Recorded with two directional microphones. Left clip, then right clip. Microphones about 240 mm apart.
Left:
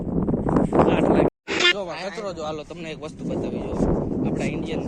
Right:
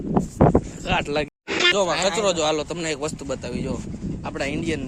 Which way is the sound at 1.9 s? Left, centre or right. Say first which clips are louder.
Right 9 dB; right.